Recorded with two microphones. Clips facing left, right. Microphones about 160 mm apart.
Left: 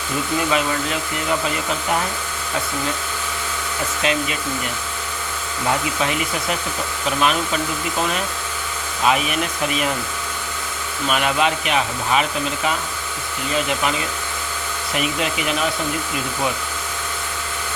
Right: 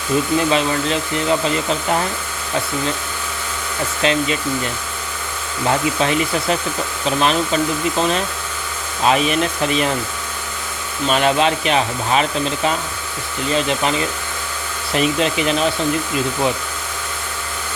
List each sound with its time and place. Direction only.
0.5 s hair dryer: 25° right (ahead or behind)
4.0 s hair dryer: 30° right (ahead or behind)
6.0 s speech: 30° right (ahead or behind)
7.2 s hair dryer: 30° right (ahead or behind)
11.1 s speech: 30° right (ahead or behind)
14.9 s hair dryer: 30° right (ahead or behind)